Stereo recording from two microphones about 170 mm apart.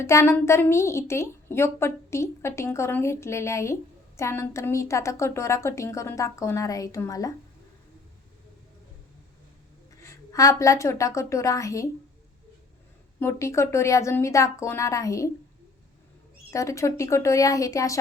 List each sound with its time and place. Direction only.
0.0 s a woman's voice: 15° left (ahead or behind)
10.0 s a woman's voice: 20° left (ahead or behind)
13.1 s a woman's voice: 15° left (ahead or behind)
16.5 s a woman's voice: 20° left (ahead or behind)